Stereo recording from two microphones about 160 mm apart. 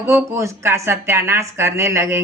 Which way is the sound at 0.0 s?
20° right (ahead or behind).